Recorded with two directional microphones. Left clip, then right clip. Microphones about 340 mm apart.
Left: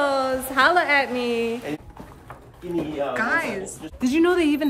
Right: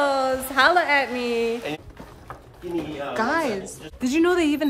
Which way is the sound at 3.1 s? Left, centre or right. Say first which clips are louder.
Right 2 dB; centre.